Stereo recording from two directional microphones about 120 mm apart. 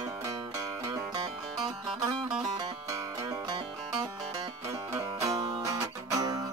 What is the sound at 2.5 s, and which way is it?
Music, 30° right (ahead or behind).